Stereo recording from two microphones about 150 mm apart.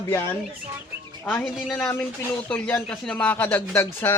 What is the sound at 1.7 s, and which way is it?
Speech, 15° left (ahead or behind).